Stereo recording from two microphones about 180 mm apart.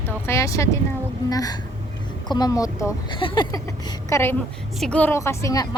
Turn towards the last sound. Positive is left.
turn(degrees=20)  # may be behind; listen again after turning